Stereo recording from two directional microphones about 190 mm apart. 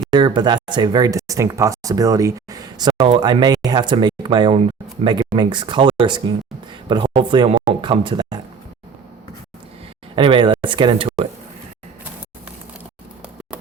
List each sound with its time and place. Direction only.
0.1 s speech: 25° right (ahead or behind)
10.2 s speech: 25° right (ahead or behind)